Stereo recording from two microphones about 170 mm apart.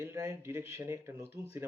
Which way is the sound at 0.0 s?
15° right (ahead or behind).